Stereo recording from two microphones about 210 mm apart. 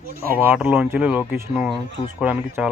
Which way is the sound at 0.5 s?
5° right (ahead or behind).